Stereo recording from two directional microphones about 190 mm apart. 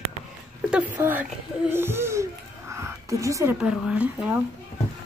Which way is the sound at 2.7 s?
15° right (ahead or behind).